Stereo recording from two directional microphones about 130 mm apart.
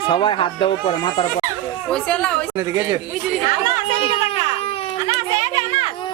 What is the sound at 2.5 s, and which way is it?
Speech, 25° right (ahead or behind).